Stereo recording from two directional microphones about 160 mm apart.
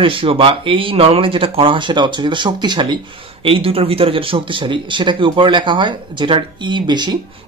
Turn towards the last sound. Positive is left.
turn(degrees=-30)  # may be behind; listen again after turning